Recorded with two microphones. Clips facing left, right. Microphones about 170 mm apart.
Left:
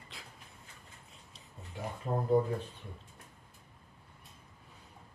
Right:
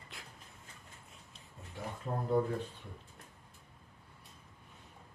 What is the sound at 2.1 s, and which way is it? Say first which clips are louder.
Speech: left 4 dB; 15° left (ahead or behind).